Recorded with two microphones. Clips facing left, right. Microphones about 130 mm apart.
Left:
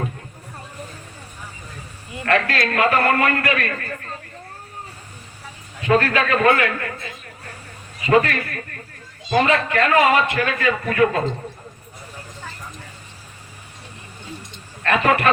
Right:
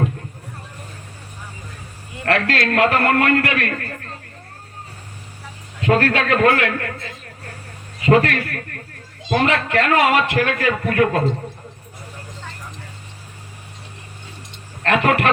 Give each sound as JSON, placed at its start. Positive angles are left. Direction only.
{"t": 2.2, "sound": "a man's voice", "side_deg": -70}
{"t": 5.8, "sound": "a man's voice", "side_deg": -65}
{"t": 8.0, "sound": "a man's voice", "side_deg": -70}
{"t": 14.8, "sound": "a man's voice", "side_deg": -65}